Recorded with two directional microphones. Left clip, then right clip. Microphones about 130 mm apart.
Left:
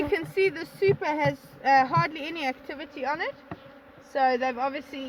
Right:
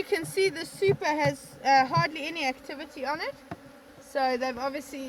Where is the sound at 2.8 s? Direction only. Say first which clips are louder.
Left 2 dB; 10° left (ahead or behind).